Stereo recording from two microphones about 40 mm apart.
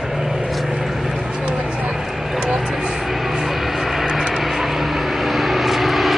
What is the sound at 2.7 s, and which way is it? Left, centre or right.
Vehicle, centre.